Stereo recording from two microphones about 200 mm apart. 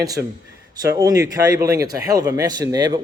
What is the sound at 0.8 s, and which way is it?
Speech, 15° right (ahead or behind).